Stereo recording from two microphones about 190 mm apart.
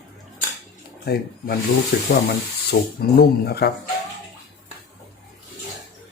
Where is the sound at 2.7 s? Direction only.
80° left.